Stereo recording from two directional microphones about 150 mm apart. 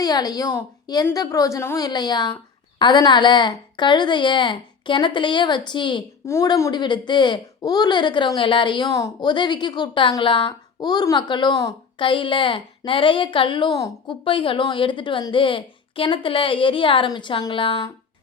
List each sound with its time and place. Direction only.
0.0 s a woman's voice: 25° left (ahead or behind)
6.2 s a woman's voice: 20° left (ahead or behind)
14.3 s speech: 35° left (ahead or behind)